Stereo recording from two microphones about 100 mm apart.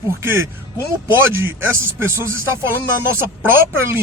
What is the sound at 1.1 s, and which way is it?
Speech, 20° right (ahead or behind).